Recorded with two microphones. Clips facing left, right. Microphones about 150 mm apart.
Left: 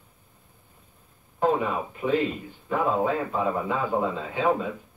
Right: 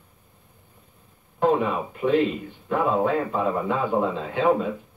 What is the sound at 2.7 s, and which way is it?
Speech, centre (ahead or behind).